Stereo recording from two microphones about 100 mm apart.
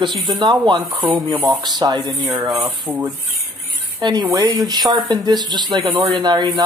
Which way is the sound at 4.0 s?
45° right (ahead or behind).